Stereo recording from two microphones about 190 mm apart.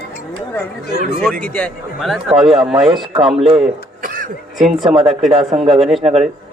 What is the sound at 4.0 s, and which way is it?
Cough, 45° right (ahead or behind).